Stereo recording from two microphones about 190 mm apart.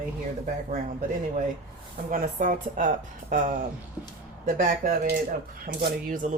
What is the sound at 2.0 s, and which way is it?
Speech, 45° right (ahead or behind).